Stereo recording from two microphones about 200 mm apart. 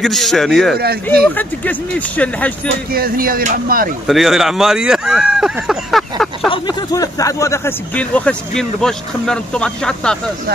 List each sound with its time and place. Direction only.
0.0 s a man's voice: centre (ahead or behind)
2.9 s speech: 45° right (ahead or behind)
4.1 s speech: centre (ahead or behind)
6.5 s speech: 20° left (ahead or behind); by 10.1 s 5° left (ahead or behind)